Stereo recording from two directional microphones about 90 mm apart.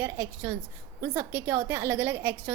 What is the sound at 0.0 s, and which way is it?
A woman's voice, 25° right (ahead or behind).